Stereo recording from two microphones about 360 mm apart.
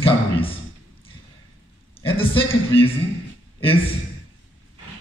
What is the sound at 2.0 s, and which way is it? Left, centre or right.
Speech, centre.